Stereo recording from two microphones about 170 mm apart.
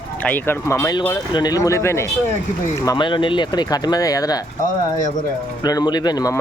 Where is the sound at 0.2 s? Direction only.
10° left (ahead or behind).